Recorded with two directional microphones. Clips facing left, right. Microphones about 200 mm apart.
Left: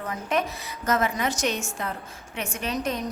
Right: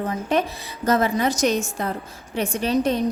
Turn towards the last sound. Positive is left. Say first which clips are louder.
# right 8 dB
turn(degrees=-30)  # may be behind; listen again after turning